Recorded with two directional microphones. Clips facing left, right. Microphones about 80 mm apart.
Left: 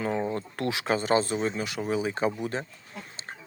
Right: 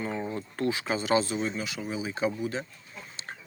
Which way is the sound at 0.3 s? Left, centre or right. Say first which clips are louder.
Even; left.